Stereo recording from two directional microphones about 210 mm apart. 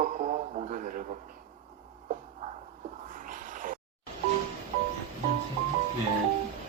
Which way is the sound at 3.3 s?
40° right (ahead or behind).